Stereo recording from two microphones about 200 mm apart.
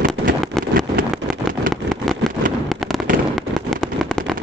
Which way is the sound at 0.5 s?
Centre (ahead or behind).